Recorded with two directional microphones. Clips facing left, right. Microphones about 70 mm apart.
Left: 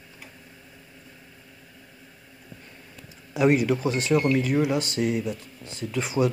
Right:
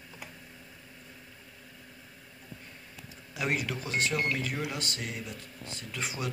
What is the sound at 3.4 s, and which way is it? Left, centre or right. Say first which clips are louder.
Speech: left 12 dB; centre.